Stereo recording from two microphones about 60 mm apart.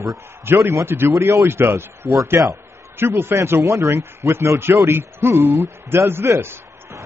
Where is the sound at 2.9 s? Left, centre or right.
Right.